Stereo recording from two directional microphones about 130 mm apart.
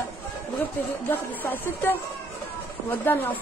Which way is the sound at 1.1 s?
15° left (ahead or behind).